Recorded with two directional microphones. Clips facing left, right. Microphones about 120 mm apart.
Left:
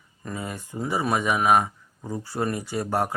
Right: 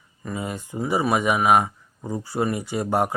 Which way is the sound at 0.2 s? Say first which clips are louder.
Right 3 dB; 10° right (ahead or behind).